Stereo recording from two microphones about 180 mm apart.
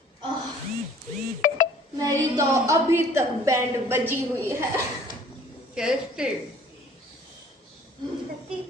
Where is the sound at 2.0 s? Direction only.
20° right (ahead or behind).